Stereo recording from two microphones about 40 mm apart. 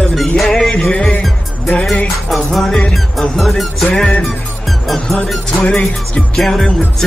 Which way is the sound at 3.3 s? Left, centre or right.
Centre.